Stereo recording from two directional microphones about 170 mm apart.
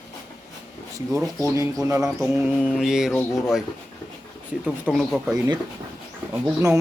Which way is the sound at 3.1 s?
15° left (ahead or behind).